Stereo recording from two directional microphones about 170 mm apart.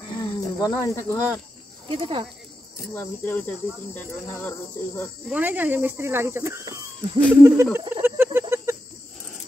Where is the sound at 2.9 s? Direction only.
10° left (ahead or behind).